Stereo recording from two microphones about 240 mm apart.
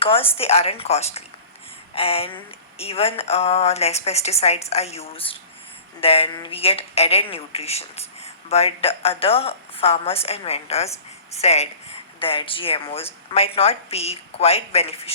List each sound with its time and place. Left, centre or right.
0.0 s a woman's voice: left